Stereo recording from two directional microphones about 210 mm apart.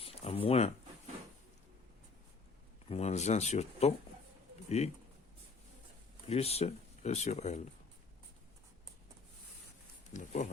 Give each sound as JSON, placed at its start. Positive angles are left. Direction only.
{"t": 0.0, "sound": "a sound", "side_deg": 30}
{"t": 2.9, "sound": "speech", "side_deg": 30}
{"t": 6.2, "sound": "speech", "side_deg": 30}
{"t": 10.1, "sound": "speech", "side_deg": 35}